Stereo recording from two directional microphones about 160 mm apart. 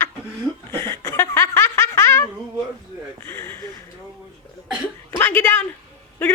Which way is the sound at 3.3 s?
15° left (ahead or behind).